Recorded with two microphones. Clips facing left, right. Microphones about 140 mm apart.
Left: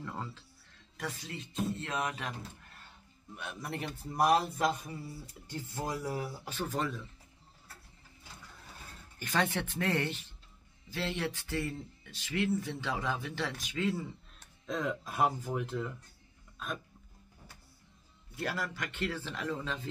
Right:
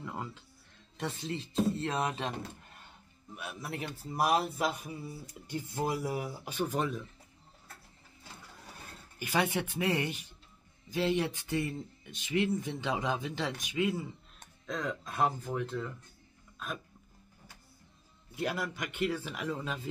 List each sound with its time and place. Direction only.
0.0 s music: 15° right (ahead or behind)
0.9 s speech: 25° right (ahead or behind)
3.3 s a man's voice: 5° right (ahead or behind)
9.2 s speech: 10° right (ahead or behind)
14.7 s speech: 5° left (ahead or behind)
16.5 s hiccup: centre (ahead or behind)
18.3 s speech: 20° right (ahead or behind)